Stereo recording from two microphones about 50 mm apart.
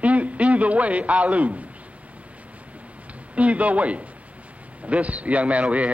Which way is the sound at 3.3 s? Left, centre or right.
Right.